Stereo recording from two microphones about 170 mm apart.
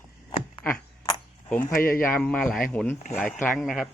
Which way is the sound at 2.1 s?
5° left (ahead or behind).